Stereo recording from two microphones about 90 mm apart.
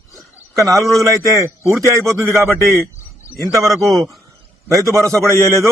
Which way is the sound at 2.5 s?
35° left (ahead or behind).